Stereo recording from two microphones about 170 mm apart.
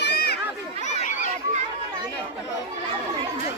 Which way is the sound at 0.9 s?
45° left (ahead or behind).